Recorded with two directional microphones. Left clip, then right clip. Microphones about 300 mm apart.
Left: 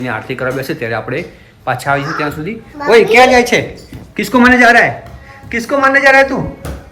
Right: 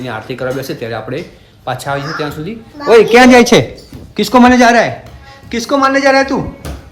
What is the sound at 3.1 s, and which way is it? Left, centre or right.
Speech, right.